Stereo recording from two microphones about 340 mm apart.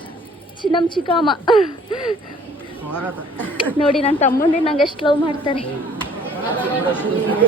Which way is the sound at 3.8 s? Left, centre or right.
Centre.